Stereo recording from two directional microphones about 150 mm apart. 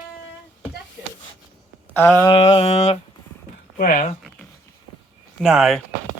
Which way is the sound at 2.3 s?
40° left (ahead or behind).